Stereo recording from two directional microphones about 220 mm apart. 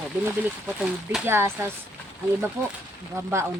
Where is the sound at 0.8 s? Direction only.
5° right (ahead or behind).